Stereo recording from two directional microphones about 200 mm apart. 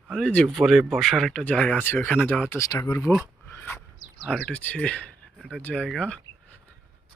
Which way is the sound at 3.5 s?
10° left (ahead or behind).